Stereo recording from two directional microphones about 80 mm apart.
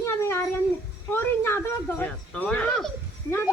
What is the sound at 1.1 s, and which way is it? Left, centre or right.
Speech, left.